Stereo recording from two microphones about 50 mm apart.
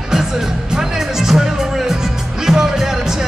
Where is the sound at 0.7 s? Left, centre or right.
Centre.